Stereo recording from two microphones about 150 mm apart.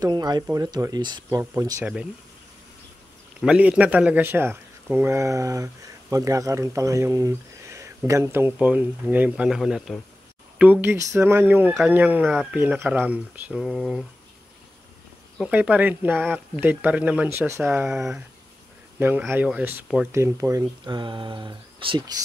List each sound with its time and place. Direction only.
0.0 s speech: 25° right (ahead or behind)
3.3 s speech: 5° right (ahead or behind)
10.6 s speech: 10° right (ahead or behind)
15.4 s speech: 10° right (ahead or behind)
18.9 s speech: 15° right (ahead or behind)